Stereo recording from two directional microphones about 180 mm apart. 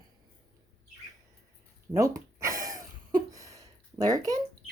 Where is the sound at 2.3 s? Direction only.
15° right (ahead or behind).